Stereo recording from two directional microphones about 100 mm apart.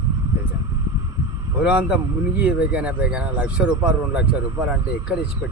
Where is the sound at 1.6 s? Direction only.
10° right (ahead or behind).